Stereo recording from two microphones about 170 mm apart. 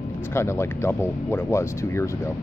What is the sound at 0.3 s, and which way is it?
Speech, 15° left (ahead or behind).